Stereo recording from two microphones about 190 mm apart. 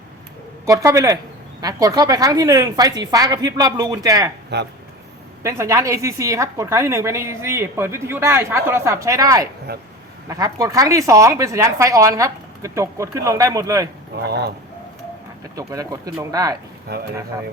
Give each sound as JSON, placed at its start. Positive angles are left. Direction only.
{"t": 0.6, "sound": "a woman's voice", "side_deg": -15}
{"t": 4.5, "sound": "speech", "side_deg": -60}
{"t": 5.4, "sound": "a woman's voice", "side_deg": -15}
{"t": 9.7, "sound": "speech", "side_deg": -55}
{"t": 10.2, "sound": "a woman's voice", "side_deg": -20}
{"t": 14.3, "sound": "speech", "side_deg": -60}
{"t": 15.5, "sound": "a woman's voice", "side_deg": -20}
{"t": 16.9, "sound": "speech", "side_deg": -55}